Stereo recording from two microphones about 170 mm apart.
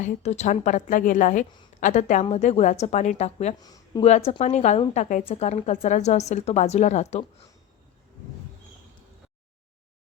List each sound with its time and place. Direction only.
0.0 s a woman's voice: 40° left (ahead or behind)
3.6 s speech: 20° left (ahead or behind)
4.3 s a woman's voice: 40° left (ahead or behind)